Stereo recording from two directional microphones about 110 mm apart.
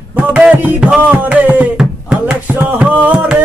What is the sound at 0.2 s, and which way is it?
Music, 10° right (ahead or behind).